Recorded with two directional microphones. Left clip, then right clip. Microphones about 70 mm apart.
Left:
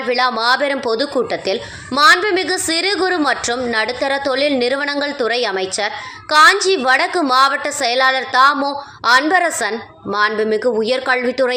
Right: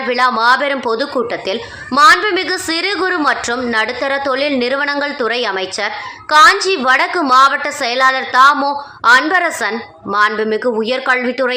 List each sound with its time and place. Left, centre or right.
0.1 s a woman's voice: left